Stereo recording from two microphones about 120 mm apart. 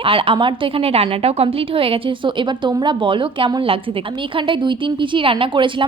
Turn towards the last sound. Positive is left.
turn(degrees=-45)  # may be behind; listen again after turning